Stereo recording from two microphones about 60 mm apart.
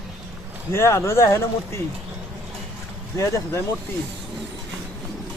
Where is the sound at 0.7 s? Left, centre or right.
Left.